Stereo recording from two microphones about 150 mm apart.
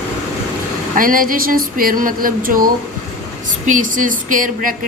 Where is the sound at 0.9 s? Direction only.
65° right (ahead or behind).